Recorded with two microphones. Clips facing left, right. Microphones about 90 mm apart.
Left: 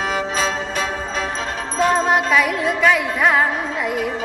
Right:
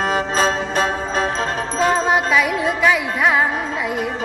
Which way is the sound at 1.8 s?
Centre (ahead or behind).